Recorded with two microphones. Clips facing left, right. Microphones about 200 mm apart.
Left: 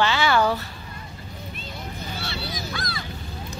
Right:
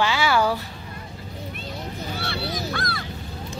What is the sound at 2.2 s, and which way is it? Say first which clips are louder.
Honk: right 5 dB; 60° right (ahead or behind).